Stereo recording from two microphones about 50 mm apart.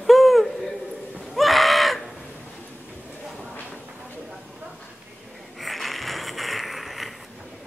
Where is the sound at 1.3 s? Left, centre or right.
Centre.